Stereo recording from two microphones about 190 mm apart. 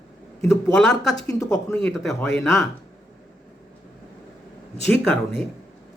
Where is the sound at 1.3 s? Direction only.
15° left (ahead or behind).